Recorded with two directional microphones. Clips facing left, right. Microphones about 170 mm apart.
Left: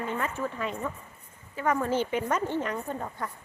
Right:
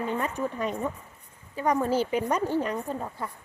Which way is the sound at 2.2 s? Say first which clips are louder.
Right 2 dB; 10° right (ahead or behind).